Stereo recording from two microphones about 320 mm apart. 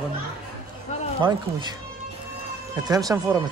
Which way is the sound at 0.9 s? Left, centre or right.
Left.